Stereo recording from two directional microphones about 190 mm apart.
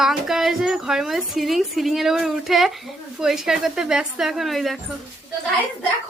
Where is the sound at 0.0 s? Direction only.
Centre (ahead or behind).